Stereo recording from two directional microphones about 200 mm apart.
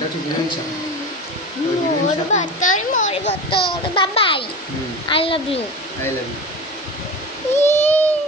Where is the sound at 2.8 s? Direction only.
35° left (ahead or behind).